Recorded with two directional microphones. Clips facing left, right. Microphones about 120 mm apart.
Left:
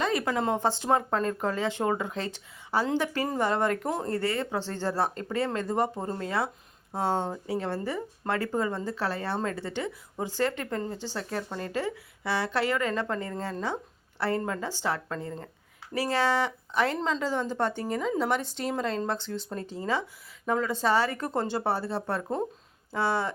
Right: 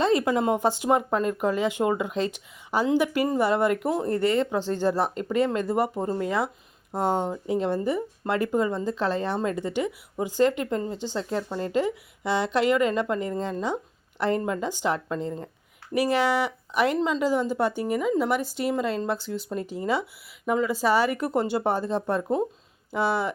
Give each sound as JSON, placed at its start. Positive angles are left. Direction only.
{"t": 0.0, "sound": "speech", "side_deg": -20}
{"t": 3.8, "sound": "speech", "side_deg": -5}
{"t": 4.1, "sound": "speech", "side_deg": -20}